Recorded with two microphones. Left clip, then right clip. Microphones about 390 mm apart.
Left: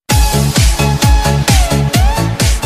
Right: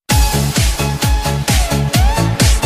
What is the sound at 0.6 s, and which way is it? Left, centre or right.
Music, left.